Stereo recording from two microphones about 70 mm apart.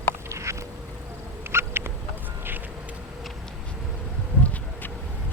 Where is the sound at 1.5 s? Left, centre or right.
Right.